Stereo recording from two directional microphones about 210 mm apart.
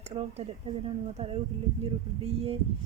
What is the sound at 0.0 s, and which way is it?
Speech, 30° right (ahead or behind).